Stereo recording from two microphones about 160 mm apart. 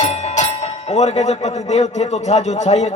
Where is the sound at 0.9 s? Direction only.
45° left (ahead or behind).